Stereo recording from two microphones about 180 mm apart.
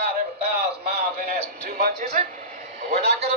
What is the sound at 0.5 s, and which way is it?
Music, 60° right (ahead or behind).